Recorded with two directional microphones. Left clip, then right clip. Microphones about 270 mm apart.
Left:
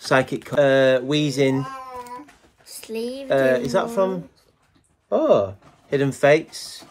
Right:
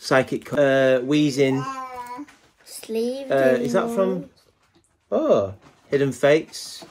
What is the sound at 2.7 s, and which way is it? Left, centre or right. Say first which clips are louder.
Speech: right 3 dB; right.